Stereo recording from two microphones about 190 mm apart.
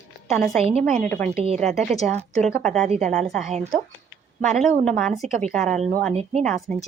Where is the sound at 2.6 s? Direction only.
5° left (ahead or behind).